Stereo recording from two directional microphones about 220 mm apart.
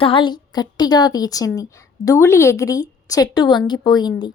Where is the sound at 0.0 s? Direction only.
25° left (ahead or behind).